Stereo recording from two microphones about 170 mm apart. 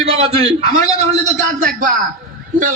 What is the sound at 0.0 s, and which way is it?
A man's voice, 35° right (ahead or behind).